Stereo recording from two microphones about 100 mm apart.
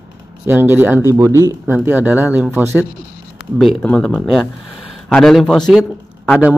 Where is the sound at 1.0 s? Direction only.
30° right (ahead or behind).